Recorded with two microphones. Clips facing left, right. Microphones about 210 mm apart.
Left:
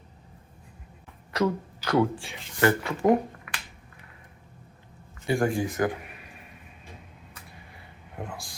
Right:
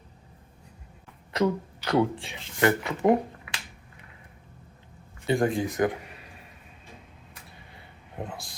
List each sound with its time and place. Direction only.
1.3 s speech: 20° right (ahead or behind)
5.2 s speech: 20° right (ahead or behind)
8.2 s speech: 20° right (ahead or behind)